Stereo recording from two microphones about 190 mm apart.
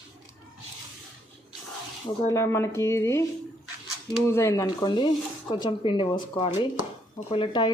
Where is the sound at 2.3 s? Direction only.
15° left (ahead or behind).